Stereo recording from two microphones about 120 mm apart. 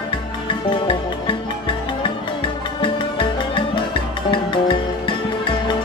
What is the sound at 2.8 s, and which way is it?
Music, 45° left (ahead or behind).